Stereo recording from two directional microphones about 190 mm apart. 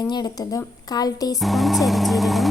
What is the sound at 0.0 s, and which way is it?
A woman's voice, 20° left (ahead or behind).